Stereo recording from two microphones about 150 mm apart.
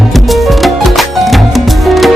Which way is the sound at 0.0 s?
Centre (ahead or behind).